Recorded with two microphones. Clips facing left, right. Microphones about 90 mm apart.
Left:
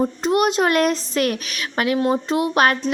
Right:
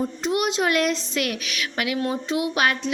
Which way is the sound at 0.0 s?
45° left (ahead or behind).